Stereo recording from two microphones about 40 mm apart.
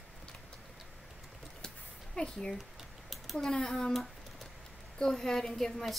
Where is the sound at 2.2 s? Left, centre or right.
Centre.